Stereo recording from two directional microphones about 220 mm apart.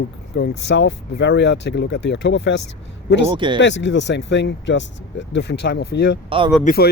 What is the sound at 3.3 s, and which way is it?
Speech, 20° right (ahead or behind).